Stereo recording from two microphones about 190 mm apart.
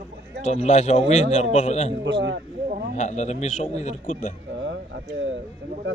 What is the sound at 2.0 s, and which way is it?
Speech, 70° right (ahead or behind).